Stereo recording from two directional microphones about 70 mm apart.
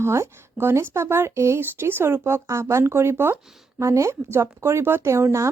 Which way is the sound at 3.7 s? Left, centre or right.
Right.